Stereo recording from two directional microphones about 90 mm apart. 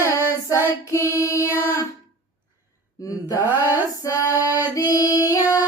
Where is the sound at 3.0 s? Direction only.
40° left (ahead or behind).